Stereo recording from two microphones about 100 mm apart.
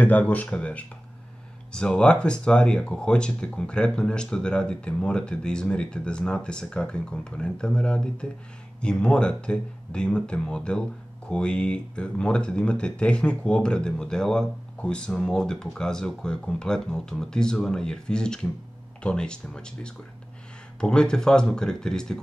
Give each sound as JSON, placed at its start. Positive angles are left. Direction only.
{"t": 0.0, "sound": "speech", "side_deg": 15}